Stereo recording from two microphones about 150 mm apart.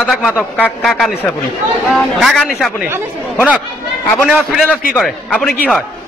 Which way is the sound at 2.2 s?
Centre (ahead or behind).